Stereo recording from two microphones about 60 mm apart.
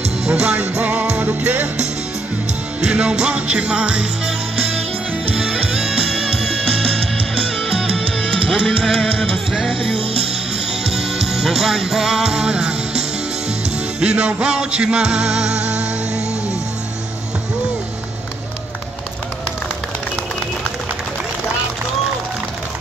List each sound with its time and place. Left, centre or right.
0.4 s music: centre
8.5 s music: centre